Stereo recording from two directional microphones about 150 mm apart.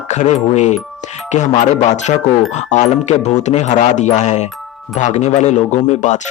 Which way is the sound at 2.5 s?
50° left (ahead or behind).